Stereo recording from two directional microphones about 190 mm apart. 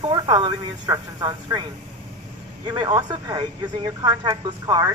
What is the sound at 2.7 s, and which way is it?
Speech, 25° right (ahead or behind).